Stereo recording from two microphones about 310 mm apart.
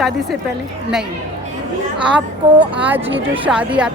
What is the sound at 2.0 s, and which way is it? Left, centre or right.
A woman's voice, centre.